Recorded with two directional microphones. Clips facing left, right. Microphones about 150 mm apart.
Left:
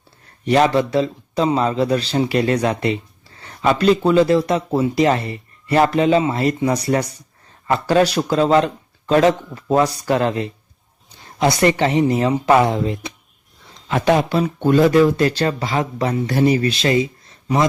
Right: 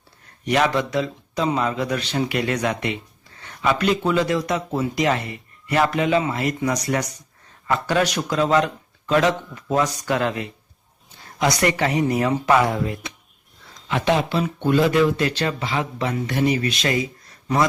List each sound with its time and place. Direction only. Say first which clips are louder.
0.4 s a man's voice: left 5 dB; 30° left (ahead or behind)
13.8 s a man's voice: left 4 dB; 40° left (ahead or behind); by 17.7 s 25° left (ahead or behind)